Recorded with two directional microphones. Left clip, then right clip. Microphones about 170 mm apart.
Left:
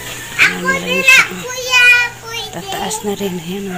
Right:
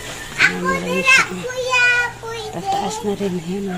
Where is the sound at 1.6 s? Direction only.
50° right (ahead or behind).